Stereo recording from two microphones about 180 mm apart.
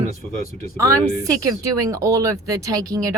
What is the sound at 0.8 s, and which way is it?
A woman's voice, 20° right (ahead or behind).